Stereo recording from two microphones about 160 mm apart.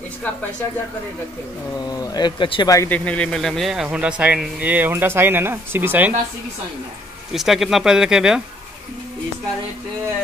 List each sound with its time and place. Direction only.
1.9 s speech: 25° left (ahead or behind)
2.9 s speech: 5° left (ahead or behind); by 6.1 s 10° right (ahead or behind)
7.3 s speech: centre (ahead or behind)